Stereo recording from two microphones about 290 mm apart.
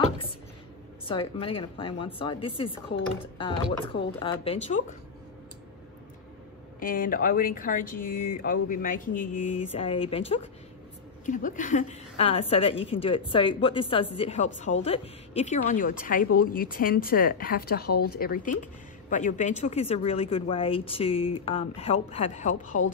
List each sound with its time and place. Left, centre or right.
1.0 s a woman's voice: centre
6.8 s a woman's voice: left